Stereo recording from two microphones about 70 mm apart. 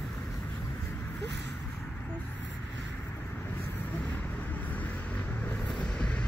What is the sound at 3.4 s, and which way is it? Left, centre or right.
Vehicle, left.